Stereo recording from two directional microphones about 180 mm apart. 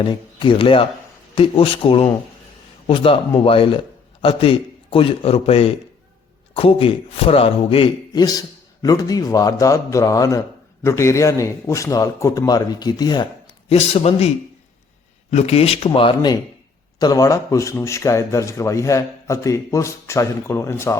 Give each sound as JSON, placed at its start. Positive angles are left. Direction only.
{"t": 0.0, "sound": "a man's voice", "side_deg": 25}
{"t": 13.7, "sound": "a man's voice", "side_deg": 35}